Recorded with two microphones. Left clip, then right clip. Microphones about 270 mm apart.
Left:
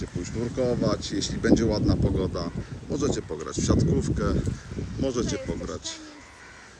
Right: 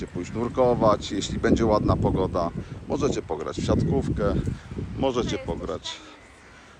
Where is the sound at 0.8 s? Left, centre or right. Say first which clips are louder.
Right 6 dB; centre.